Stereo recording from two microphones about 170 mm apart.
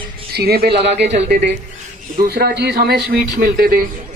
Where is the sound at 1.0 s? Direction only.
45° right (ahead or behind).